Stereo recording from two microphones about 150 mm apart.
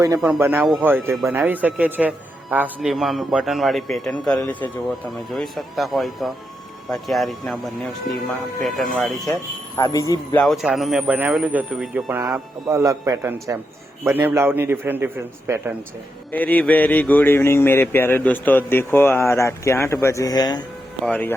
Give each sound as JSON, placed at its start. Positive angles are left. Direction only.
{"t": 0.3, "sound": "a man's voice", "side_deg": -15}
{"t": 2.9, "sound": "speech", "side_deg": 0}
{"t": 5.3, "sound": "speech", "side_deg": 0}
{"t": 9.3, "sound": "speech", "side_deg": 20}
{"t": 10.3, "sound": "speech", "side_deg": 0}
{"t": 12.2, "sound": "a man's voice", "side_deg": -20}
{"t": 16.3, "sound": "speech", "side_deg": 10}
{"t": 21.0, "sound": "speech", "side_deg": 10}